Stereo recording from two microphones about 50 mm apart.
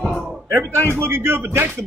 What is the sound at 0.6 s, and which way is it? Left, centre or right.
Speech, left.